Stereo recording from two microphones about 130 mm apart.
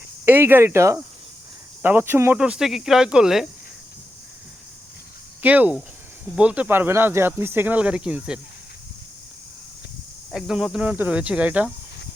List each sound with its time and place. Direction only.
0.3 s speech: 15° right (ahead or behind)
2.4 s speech: 5° right (ahead or behind)
5.4 s speech: 10° right (ahead or behind)
10.3 s speech: 5° right (ahead or behind)